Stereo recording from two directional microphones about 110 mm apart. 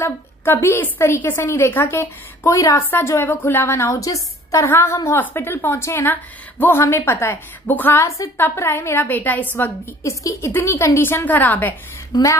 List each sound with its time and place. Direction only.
0.0 s a woman's voice: 20° left (ahead or behind)
10.0 s a woman's voice: 25° left (ahead or behind)